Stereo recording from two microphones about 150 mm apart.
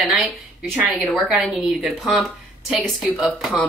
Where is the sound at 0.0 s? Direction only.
5° right (ahead or behind).